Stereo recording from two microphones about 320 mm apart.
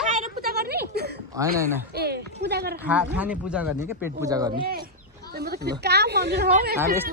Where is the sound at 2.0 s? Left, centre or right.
Right.